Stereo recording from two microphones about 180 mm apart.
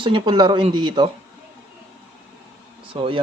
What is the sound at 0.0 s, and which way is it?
Speech, 25° right (ahead or behind).